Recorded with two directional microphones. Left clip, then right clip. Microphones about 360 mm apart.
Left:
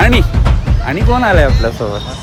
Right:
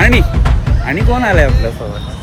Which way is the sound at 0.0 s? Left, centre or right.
Centre.